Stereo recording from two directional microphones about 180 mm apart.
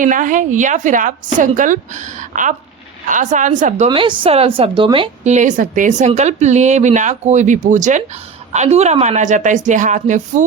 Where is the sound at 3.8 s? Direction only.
25° right (ahead or behind).